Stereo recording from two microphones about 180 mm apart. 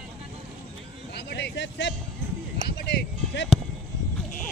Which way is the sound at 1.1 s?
70° left (ahead or behind).